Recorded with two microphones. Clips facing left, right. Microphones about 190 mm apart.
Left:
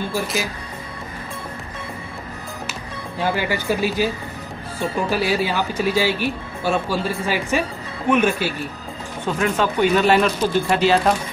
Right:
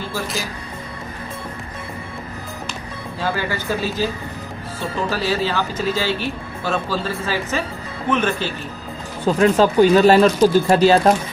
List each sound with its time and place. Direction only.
3.2 s speech: 15° left (ahead or behind)
9.2 s speech: 35° right (ahead or behind)